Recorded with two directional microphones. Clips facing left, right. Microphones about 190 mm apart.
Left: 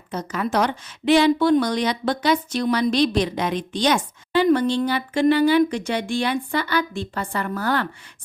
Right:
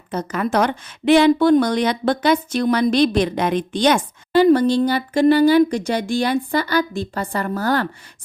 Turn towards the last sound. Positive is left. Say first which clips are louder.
# right 3 dB
turn(degrees=-40)  # may be behind; listen again after turning